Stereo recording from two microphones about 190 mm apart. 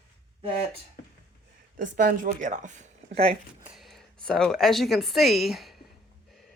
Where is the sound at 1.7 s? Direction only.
45° right (ahead or behind).